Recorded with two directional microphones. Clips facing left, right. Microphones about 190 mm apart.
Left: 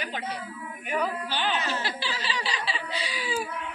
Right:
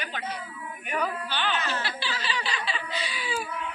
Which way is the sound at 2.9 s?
35° left (ahead or behind).